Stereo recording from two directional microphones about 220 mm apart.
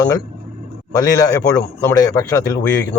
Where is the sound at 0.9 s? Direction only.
15° left (ahead or behind).